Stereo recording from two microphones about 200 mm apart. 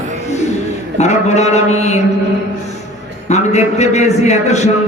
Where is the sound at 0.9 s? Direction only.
35° left (ahead or behind).